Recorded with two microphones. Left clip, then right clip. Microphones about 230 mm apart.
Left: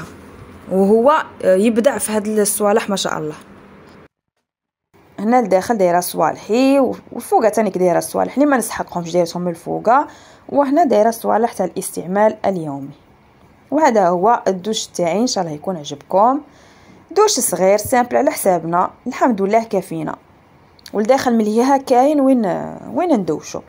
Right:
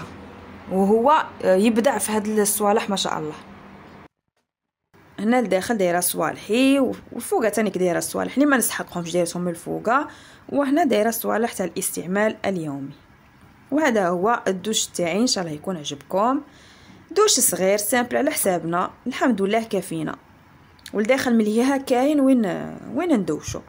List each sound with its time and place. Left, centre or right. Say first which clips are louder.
0.7 s a woman's voice: left 5 dB; centre
5.3 s speech: left 6 dB; centre